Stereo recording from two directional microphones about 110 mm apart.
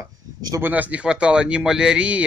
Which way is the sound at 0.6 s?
15° right (ahead or behind).